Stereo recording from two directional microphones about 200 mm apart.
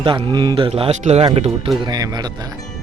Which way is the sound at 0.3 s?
20° right (ahead or behind).